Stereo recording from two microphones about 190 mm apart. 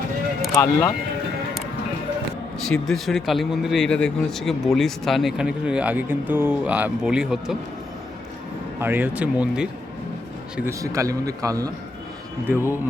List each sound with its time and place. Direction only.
0.5 s speech: 15° left (ahead or behind)
2.6 s speech: centre (ahead or behind)
8.8 s a man's voice: 10° right (ahead or behind)
10.7 s a man's voice: 15° right (ahead or behind)